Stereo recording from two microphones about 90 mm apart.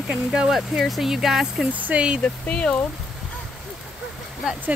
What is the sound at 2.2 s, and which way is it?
Speech, 10° left (ahead or behind).